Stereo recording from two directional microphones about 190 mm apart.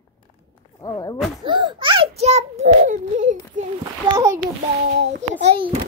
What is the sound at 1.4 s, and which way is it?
A child's voice, 25° right (ahead or behind).